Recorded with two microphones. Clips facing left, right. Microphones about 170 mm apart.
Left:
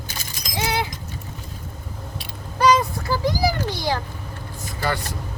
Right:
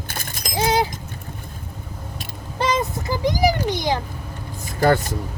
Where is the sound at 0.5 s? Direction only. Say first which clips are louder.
Right 5 dB; 35° right (ahead or behind).